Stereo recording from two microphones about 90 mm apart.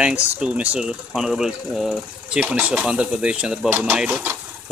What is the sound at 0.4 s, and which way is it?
Speech, 15° right (ahead or behind).